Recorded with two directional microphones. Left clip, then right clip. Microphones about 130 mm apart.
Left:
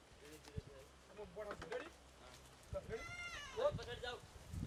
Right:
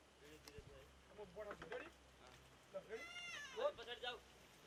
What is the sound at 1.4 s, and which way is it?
Speech, 15° left (ahead or behind).